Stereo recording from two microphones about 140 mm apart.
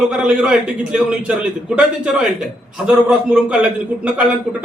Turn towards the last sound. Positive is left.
turn(degrees=-10)  # may be behind; listen again after turning